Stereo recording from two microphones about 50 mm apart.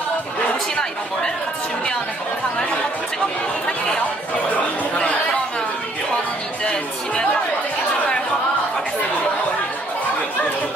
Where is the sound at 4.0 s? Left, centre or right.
Left.